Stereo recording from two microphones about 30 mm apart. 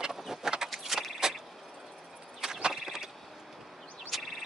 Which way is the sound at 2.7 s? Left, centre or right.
Centre.